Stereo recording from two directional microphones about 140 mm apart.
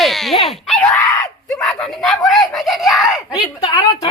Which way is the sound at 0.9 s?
10° left (ahead or behind).